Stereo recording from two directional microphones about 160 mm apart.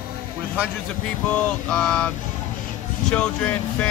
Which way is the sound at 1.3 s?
5° left (ahead or behind).